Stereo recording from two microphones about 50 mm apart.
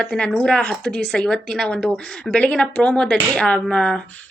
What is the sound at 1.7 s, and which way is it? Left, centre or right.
A woman's voice, left.